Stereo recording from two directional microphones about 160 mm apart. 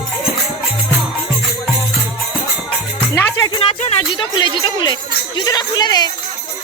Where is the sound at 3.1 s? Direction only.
15° left (ahead or behind).